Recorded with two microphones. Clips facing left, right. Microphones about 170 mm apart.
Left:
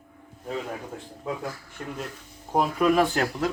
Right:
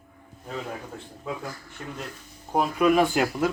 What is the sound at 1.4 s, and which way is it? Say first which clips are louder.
A man's voice: left 2 dB; centre (ahead or behind).